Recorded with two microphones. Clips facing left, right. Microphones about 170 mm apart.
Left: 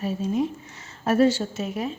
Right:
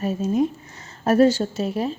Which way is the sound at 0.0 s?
45° right (ahead or behind).